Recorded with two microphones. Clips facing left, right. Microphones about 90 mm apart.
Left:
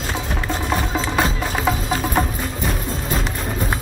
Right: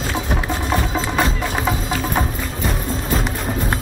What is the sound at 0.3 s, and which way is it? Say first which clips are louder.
Music: right 1 dB; 5° right (ahead or behind).